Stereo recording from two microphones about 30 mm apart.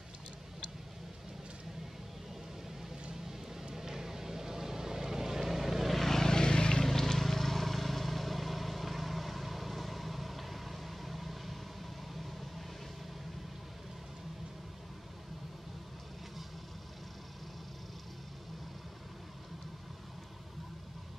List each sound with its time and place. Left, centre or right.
3.7 s vehicle: centre
5.9 s vehicle: centre
6.2 s vehicle: left
6.8 s vehicle: centre